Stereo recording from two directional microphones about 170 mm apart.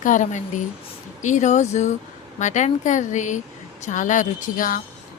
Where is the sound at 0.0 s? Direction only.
50° left (ahead or behind).